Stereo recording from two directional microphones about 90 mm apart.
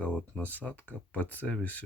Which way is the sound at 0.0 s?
15° left (ahead or behind).